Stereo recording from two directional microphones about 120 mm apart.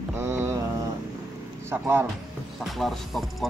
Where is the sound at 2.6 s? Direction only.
Centre (ahead or behind).